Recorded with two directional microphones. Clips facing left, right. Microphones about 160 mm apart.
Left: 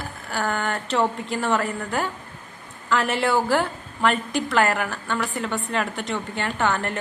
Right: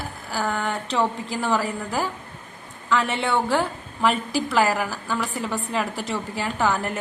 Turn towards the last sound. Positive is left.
turn(degrees=-5)  # may be behind; listen again after turning